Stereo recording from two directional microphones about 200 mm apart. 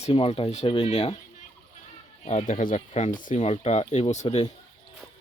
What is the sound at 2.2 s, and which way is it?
Speech, 35° left (ahead or behind).